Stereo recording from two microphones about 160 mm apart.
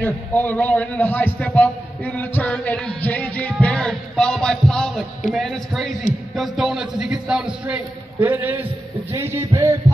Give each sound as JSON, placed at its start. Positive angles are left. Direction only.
{"t": 0.0, "sound": "a man's voice", "side_deg": 10}
{"t": 3.6, "sound": "music", "side_deg": 5}
{"t": 5.3, "sound": "speech", "side_deg": 0}
{"t": 6.3, "sound": "a sound", "side_deg": 0}